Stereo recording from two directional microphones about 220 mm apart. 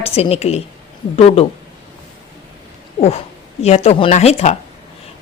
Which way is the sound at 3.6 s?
30° left (ahead or behind).